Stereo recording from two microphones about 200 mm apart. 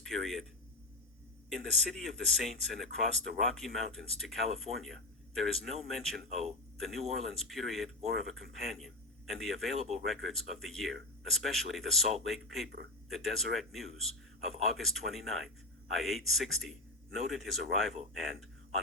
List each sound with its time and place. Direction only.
0.0 s a sound: centre (ahead or behind)
1.5 s speech: centre (ahead or behind)
9.7 s speech: 35° right (ahead or behind)
10.0 s a man's voice: centre (ahead or behind)